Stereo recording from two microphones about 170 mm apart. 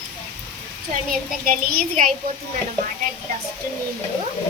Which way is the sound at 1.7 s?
55° right (ahead or behind).